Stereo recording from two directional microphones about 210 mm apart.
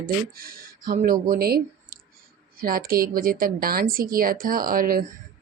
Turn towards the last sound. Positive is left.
turn(degrees=-45)  # may be behind; listen again after turning